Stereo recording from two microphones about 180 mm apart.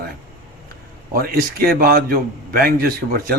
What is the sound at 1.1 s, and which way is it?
Speech, 55° right (ahead or behind).